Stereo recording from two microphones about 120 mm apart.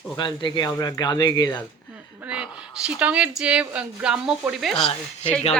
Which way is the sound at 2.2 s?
10° right (ahead or behind).